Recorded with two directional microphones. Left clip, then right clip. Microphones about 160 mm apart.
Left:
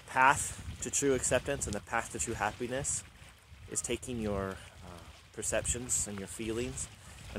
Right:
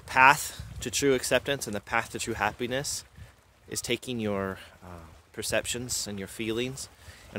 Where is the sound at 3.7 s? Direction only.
10° right (ahead or behind); by 5.6 s 25° right (ahead or behind).